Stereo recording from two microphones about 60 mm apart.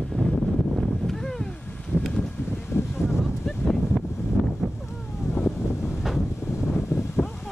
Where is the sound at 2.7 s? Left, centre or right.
Left.